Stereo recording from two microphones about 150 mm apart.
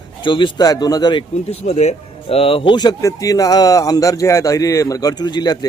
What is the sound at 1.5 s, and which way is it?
Speech, 45° left (ahead or behind).